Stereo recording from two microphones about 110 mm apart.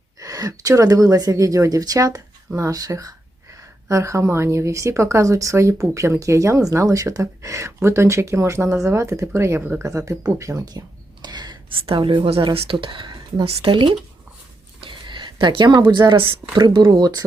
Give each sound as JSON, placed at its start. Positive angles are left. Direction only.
{"t": 0.2, "sound": "a woman's voice", "side_deg": -30}
{"t": 10.1, "sound": "a sound", "side_deg": -25}
{"t": 11.8, "sound": "a woman's voice", "side_deg": -55}